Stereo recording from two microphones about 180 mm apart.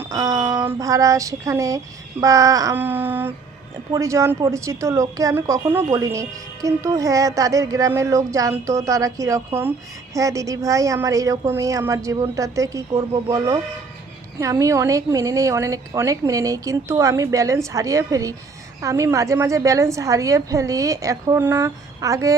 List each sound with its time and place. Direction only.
0.0 s speech: 15° right (ahead or behind)